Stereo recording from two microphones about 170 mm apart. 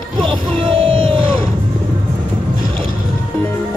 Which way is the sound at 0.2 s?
30° right (ahead or behind).